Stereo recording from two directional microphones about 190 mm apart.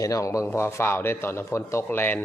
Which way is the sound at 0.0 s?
15° left (ahead or behind).